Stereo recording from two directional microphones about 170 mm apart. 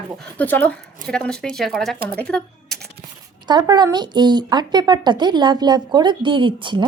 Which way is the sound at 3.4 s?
25° right (ahead or behind).